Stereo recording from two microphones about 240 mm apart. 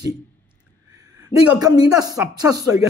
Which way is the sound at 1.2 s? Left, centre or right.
Centre.